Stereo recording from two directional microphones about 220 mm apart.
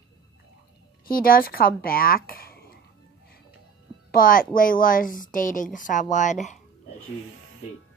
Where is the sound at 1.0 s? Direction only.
40° left (ahead or behind).